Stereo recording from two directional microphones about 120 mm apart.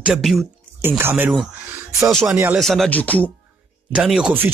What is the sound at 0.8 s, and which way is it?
Speech, 20° right (ahead or behind).